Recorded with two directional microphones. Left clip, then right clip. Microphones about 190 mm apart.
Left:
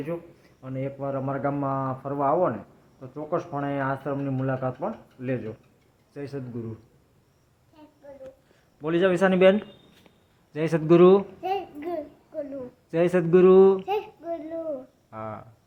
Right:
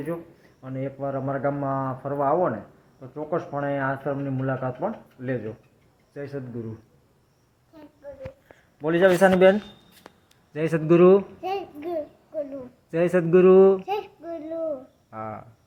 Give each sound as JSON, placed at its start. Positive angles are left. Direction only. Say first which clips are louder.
{"t": 0.6, "sound": "a man's voice", "louder": "right 1 dB", "side_deg": 0}
{"t": 8.8, "sound": "a man's voice", "louder": "right 4 dB", "side_deg": 0}
{"t": 11.4, "sound": "a sound", "louder": "even", "side_deg": 15}
{"t": 12.9, "sound": "a man's voice", "louder": "right 1 dB", "side_deg": 0}
{"t": 13.8, "sound": "child singing", "louder": "left 1 dB", "side_deg": 20}
{"t": 15.1, "sound": "a man's voice", "louder": "right 1 dB", "side_deg": 0}